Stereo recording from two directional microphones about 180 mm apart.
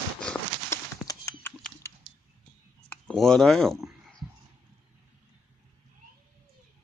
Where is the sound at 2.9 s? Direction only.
5° left (ahead or behind).